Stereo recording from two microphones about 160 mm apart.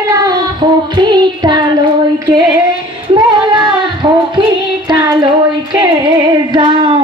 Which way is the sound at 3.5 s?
30° right (ahead or behind).